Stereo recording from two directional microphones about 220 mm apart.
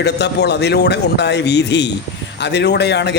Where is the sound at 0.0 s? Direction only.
50° left (ahead or behind).